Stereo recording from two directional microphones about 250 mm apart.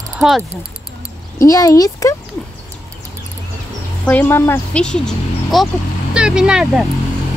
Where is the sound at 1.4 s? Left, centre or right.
Centre.